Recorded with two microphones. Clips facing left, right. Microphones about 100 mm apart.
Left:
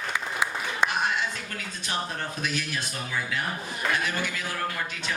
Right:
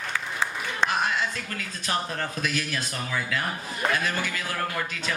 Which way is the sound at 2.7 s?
70° right (ahead or behind).